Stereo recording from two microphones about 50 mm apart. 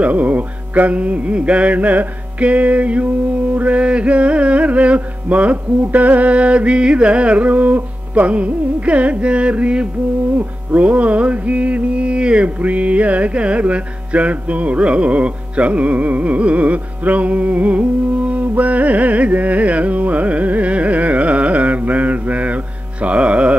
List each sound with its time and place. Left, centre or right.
0.0 s music: right
18.3 s carnatic music: right
23.0 s music: right